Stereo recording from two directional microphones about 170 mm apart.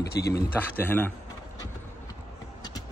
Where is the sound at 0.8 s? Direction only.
10° left (ahead or behind).